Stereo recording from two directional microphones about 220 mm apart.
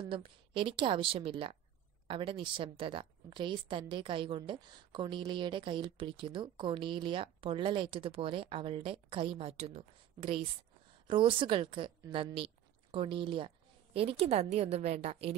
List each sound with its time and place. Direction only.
0.0 s a woman's voice: 25° right (ahead or behind)